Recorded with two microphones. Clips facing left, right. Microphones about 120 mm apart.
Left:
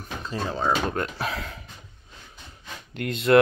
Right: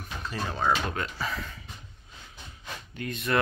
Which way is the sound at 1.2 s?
75° left (ahead or behind).